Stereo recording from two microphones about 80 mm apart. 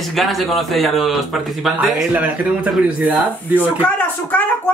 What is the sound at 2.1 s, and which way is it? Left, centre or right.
Speech, centre.